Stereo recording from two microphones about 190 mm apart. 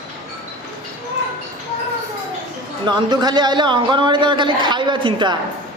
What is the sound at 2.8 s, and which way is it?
A man's voice, 20° right (ahead or behind).